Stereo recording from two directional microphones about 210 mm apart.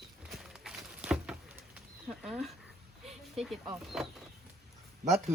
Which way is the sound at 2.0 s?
5° right (ahead or behind).